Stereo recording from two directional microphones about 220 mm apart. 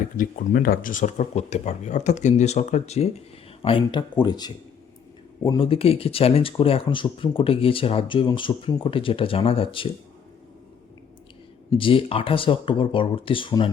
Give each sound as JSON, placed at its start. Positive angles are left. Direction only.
{"t": 0.2, "sound": "speech", "side_deg": 40}
{"t": 11.7, "sound": "speech", "side_deg": 25}